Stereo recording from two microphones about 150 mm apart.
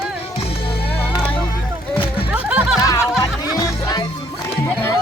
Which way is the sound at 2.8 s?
20° left (ahead or behind).